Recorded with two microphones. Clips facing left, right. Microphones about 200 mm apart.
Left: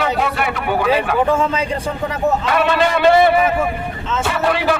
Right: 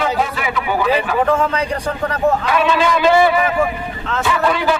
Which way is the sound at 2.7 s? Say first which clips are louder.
Left 1 dB; 60° left (ahead or behind).